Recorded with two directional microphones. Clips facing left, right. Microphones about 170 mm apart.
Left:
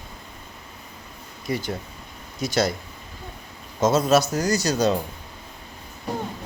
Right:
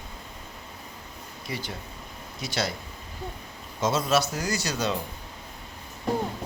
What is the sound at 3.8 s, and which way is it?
A man's voice, 45° left (ahead or behind).